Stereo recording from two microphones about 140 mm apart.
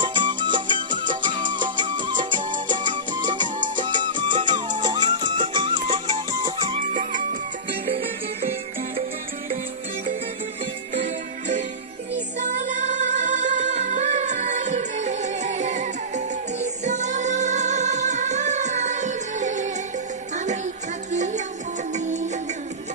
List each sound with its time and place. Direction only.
0.0 s music: 35° right (ahead or behind)
6.9 s music: 65° right (ahead or behind)
11.0 s music: 60° right (ahead or behind)